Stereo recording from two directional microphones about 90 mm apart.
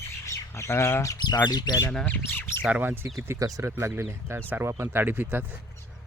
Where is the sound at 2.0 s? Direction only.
20° left (ahead or behind).